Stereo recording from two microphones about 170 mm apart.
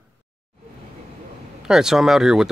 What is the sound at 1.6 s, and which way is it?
Speech, 5° right (ahead or behind).